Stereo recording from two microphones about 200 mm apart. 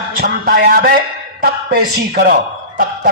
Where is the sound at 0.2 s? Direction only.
50° right (ahead or behind).